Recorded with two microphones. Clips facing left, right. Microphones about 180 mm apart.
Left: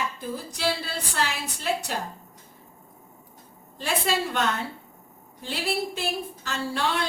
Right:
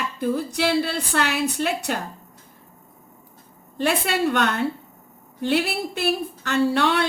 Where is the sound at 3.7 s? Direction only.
65° right (ahead or behind).